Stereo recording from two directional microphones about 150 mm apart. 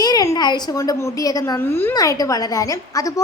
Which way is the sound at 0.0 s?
25° left (ahead or behind).